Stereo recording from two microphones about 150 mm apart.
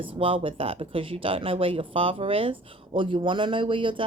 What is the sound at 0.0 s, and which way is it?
Speech, 35° right (ahead or behind).